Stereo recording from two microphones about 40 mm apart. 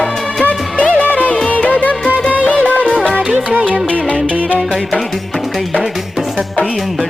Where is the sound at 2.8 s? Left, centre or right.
Left.